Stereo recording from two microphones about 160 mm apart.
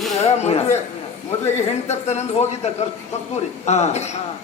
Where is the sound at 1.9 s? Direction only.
45° left (ahead or behind).